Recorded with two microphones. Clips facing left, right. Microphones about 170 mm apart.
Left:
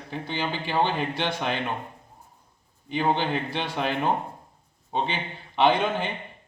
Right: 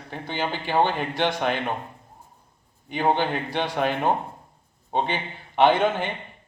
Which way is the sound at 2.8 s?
50° right (ahead or behind).